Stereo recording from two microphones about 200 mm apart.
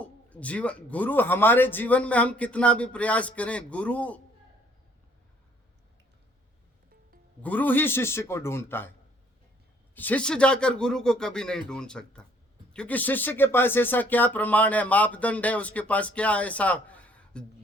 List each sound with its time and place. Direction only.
0.0 s a sound: 5° left (ahead or behind)
0.9 s speech: 10° left (ahead or behind)
7.4 s speech: 10° left (ahead or behind)
9.9 s speech: 10° left (ahead or behind)